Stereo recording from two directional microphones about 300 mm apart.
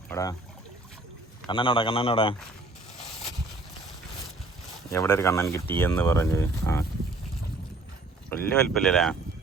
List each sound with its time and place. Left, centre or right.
0.1 s speech: centre
1.5 s speech: centre
4.9 s speech: centre
8.3 s speech: centre